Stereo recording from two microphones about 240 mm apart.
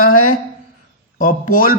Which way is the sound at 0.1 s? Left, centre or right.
Left.